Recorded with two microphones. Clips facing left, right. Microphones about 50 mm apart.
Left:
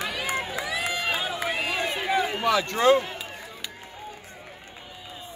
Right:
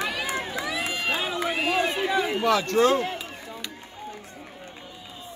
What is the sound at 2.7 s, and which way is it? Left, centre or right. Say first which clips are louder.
Speech: left 2 dB; centre.